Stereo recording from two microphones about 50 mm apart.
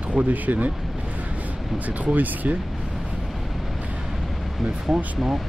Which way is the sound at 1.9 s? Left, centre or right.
Right.